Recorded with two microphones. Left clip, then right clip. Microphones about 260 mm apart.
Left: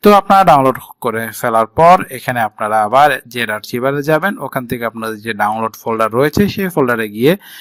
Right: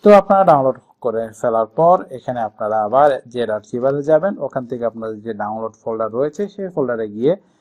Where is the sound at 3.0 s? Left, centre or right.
Left.